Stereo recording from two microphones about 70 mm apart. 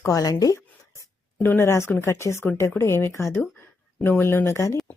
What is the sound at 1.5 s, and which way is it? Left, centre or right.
Speech, left.